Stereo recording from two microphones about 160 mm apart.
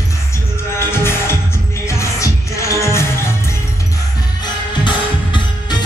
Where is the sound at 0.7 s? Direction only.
15° left (ahead or behind).